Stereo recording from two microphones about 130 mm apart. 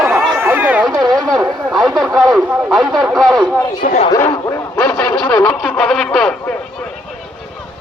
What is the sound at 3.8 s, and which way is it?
Speech, 90° left.